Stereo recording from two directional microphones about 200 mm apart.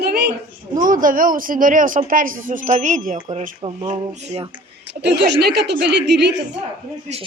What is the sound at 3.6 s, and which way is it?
Speech, 25° right (ahead or behind).